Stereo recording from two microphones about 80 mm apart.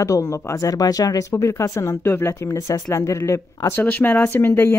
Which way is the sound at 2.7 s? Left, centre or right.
Left.